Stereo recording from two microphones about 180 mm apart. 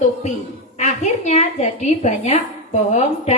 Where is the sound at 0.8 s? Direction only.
40° left (ahead or behind).